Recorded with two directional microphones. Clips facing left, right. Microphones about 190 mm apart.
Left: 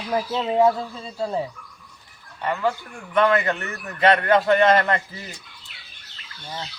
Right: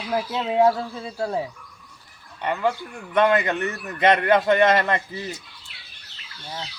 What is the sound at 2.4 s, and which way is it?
A man's voice, 20° right (ahead or behind).